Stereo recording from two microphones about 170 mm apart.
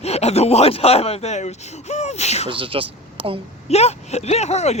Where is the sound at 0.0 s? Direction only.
40° left (ahead or behind).